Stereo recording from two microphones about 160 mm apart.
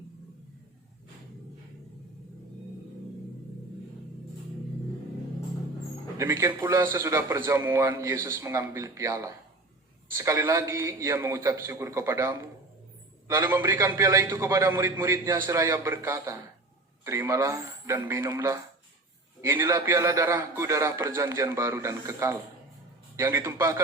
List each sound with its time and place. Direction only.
6.1 s a man's voice: 20° right (ahead or behind)